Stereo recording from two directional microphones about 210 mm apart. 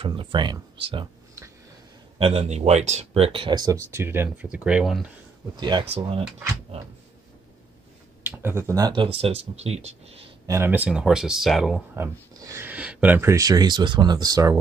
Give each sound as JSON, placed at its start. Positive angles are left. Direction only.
{"t": 0.0, "sound": "speech", "side_deg": -25}
{"t": 2.1, "sound": "speech", "side_deg": -30}
{"t": 5.6, "sound": "speech", "side_deg": -20}
{"t": 8.2, "sound": "speech", "side_deg": -10}
{"t": 10.4, "sound": "speech", "side_deg": -15}
{"t": 11.9, "sound": "speech", "side_deg": -15}